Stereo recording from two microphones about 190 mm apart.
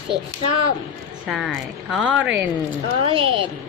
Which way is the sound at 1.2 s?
5° right (ahead or behind).